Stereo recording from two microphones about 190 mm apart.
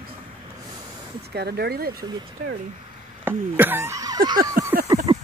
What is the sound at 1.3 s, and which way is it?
Speech, 60° right (ahead or behind).